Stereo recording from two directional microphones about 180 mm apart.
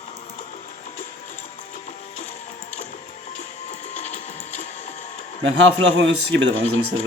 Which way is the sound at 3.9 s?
40° left (ahead or behind).